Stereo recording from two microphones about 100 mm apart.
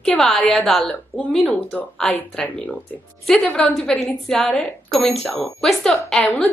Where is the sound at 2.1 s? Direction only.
15° left (ahead or behind).